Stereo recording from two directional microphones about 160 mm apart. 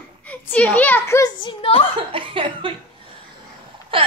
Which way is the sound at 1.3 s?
35° left (ahead or behind).